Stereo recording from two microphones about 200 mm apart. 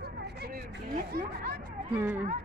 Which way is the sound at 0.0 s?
50° right (ahead or behind).